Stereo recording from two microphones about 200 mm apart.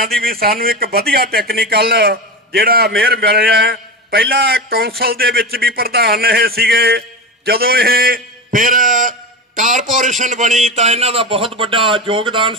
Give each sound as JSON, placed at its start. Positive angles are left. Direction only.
{"t": 0.2, "sound": "a man's voice", "side_deg": -50}